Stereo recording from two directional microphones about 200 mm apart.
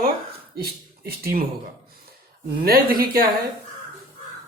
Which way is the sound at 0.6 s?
50° right (ahead or behind).